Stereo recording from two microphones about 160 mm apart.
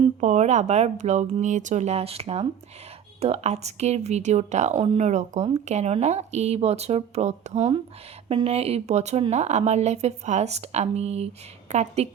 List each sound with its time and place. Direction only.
0.2 s a woman's voice: 45° right (ahead or behind)